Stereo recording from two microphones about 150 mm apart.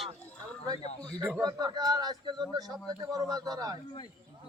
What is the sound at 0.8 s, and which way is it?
Speech, 45° left (ahead or behind).